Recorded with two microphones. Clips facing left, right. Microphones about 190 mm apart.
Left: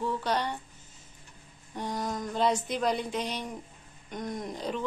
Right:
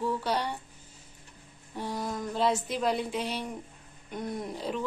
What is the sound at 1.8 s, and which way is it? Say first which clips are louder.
A woman's voice: even; 5° right (ahead or behind).